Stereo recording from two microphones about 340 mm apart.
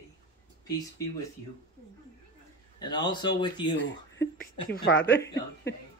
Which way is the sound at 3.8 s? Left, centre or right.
Left.